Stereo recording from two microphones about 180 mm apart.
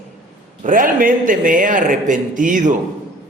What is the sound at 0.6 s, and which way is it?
A man's voice, 50° right (ahead or behind).